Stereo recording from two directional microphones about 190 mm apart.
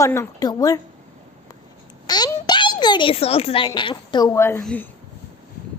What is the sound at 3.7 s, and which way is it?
A woman's voice, 25° left (ahead or behind).